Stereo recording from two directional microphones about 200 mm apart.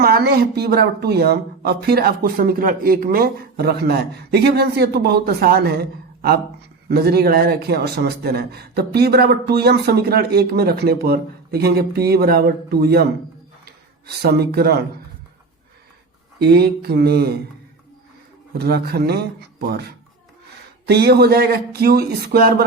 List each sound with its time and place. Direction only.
0.0 s a man's voice: 50° right (ahead or behind)
6.8 s a man's voice: 50° right (ahead or behind)
14.2 s a man's voice: 55° right (ahead or behind)
16.4 s a man's voice: 55° right (ahead or behind)
18.5 s a man's voice: 50° right (ahead or behind)
20.8 s a man's voice: 55° right (ahead or behind)